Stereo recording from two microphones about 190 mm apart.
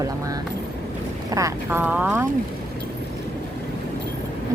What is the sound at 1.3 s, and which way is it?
Speech, 15° right (ahead or behind).